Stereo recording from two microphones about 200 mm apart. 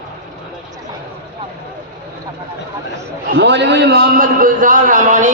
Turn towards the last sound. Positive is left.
turn(degrees=-40)  # may be behind; listen again after turning